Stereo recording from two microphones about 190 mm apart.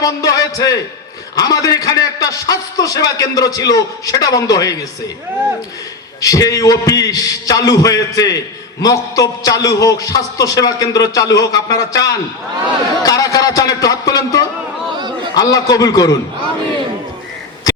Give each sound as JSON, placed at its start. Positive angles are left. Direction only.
{"t": 0.0, "sound": "a man's voice", "side_deg": 20}
{"t": 6.1, "sound": "a man's voice", "side_deg": 20}